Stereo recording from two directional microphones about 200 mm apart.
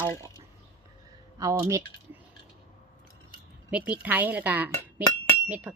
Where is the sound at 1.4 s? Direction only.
15° right (ahead or behind).